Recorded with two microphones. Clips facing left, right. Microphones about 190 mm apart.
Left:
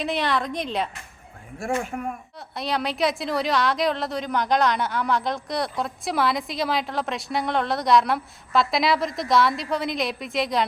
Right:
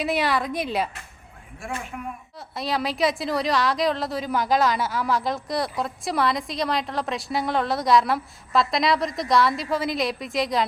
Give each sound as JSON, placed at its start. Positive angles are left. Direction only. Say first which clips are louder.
{"t": 0.0, "sound": "a woman's voice", "louder": "right 1 dB", "side_deg": -5}
{"t": 1.5, "sound": "speech", "louder": "left 6 dB", "side_deg": 45}
{"t": 2.6, "sound": "a woman's voice", "louder": "even", "side_deg": 0}